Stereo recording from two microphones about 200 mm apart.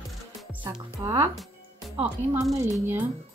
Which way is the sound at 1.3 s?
Centre (ahead or behind).